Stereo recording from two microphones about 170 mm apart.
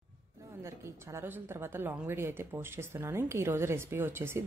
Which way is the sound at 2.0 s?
15° right (ahead or behind).